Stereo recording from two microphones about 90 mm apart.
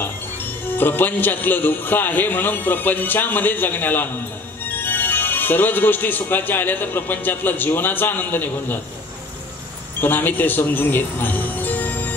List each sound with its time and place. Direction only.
0.7 s speech: 20° left (ahead or behind)
9.9 s music: 20° left (ahead or behind)